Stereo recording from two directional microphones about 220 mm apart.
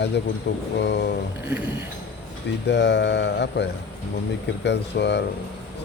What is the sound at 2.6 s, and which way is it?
Speech, 55° left (ahead or behind).